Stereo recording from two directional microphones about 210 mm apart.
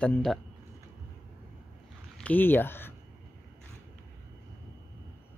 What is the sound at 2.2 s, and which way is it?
Speech, 10° left (ahead or behind).